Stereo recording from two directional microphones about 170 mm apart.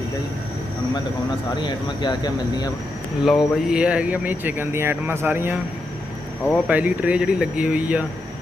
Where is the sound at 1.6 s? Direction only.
25° left (ahead or behind).